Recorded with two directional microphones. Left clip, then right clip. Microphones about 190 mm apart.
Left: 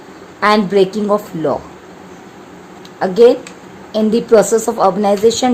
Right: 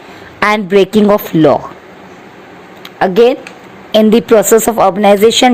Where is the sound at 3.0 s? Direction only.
30° right (ahead or behind).